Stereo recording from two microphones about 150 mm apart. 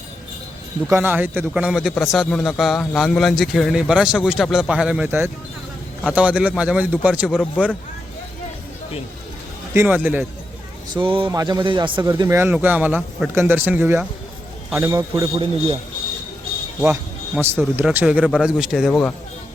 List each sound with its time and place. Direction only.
0.9 s a man's voice: 15° right (ahead or behind)
9.7 s speech: 10° right (ahead or behind)
10.9 s a man's voice: 35° right (ahead or behind)
12.4 s a man's voice: 15° right (ahead or behind); by 15.8 s 30° right (ahead or behind)
17.7 s a man's voice: 10° right (ahead or behind)